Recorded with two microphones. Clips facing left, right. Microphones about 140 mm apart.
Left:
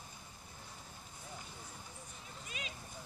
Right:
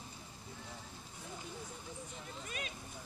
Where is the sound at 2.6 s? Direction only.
50° right (ahead or behind).